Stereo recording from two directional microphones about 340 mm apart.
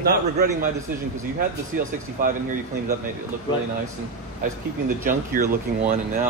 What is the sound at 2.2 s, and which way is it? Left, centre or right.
Speech, right.